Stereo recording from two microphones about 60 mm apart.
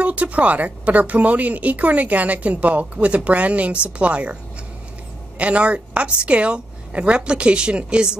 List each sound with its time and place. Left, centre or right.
0.0 s a woman's voice: right
5.4 s a woman's voice: right